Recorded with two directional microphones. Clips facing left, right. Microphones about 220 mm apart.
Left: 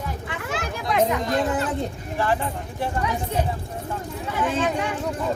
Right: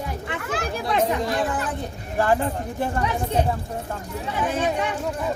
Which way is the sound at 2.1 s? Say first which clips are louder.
Right 4 dB; 45° right (ahead or behind).